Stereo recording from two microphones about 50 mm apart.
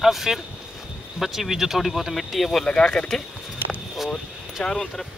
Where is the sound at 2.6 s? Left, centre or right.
Centre.